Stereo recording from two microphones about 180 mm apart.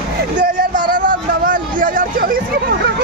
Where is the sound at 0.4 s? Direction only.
50° right (ahead or behind).